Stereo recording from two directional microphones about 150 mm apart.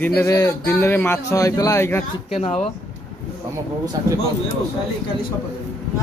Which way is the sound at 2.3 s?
45° left (ahead or behind).